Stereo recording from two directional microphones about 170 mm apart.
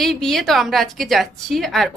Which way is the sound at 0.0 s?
Centre (ahead or behind).